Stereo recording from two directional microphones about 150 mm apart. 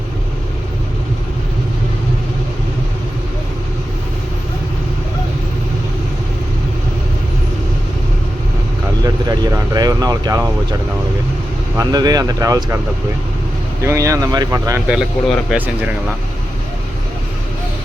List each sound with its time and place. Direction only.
9.3 s vehicle: 25° right (ahead or behind)
11.8 s speech: 25° right (ahead or behind)
13.8 s speech: 20° right (ahead or behind)
14.8 s speech: 5° right (ahead or behind)